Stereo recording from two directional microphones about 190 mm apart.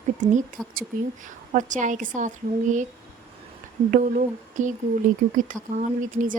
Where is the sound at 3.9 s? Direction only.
40° right (ahead or behind).